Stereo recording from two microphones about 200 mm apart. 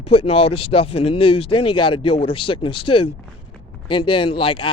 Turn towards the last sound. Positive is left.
turn(degrees=25)  # may be behind; listen again after turning